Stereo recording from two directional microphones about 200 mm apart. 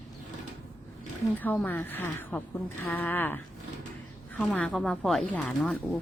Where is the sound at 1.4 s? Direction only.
10° left (ahead or behind).